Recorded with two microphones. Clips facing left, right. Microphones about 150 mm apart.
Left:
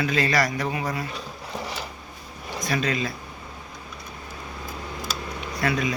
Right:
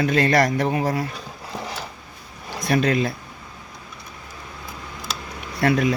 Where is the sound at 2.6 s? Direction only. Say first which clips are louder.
Right 6 dB; 60° right (ahead or behind).